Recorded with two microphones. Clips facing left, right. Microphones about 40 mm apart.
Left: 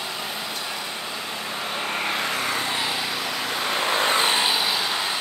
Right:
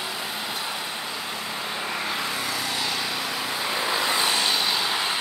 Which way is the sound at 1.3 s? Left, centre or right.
Left.